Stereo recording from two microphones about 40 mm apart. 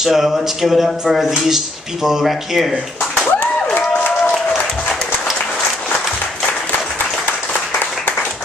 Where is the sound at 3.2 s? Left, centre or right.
Left.